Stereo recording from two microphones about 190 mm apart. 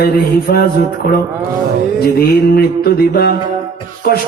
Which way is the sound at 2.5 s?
55° left (ahead or behind).